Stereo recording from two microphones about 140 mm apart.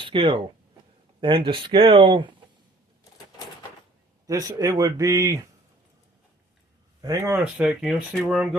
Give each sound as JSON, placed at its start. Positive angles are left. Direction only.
{"t": 0.0, "sound": "speech", "side_deg": -40}
{"t": 4.3, "sound": "speech", "side_deg": -25}
{"t": 7.0, "sound": "speech", "side_deg": -25}
{"t": 7.6, "sound": "speech", "side_deg": -5}